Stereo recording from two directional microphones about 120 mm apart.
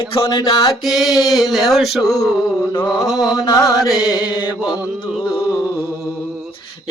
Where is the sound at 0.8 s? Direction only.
Centre (ahead or behind).